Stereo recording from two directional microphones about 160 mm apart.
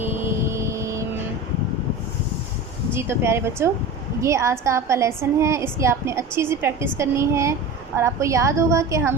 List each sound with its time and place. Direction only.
0.0 s vehicle: 15° right (ahead or behind)
2.9 s a woman's voice: 15° right (ahead or behind)